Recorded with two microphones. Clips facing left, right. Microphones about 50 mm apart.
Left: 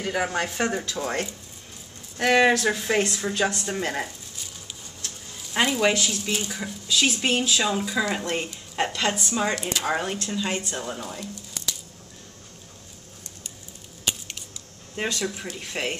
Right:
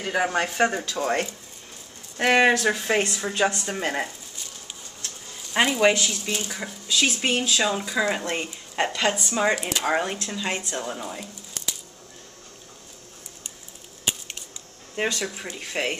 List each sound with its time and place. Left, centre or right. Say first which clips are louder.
0.0 s speech: right 2 dB; centre
5.5 s speech: right 2 dB; centre
6.0 s speech: left 1 dB; centre
15.0 s speech: right 1 dB; centre